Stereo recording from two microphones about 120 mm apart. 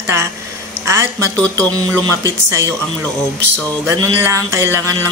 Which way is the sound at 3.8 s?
25° right (ahead or behind).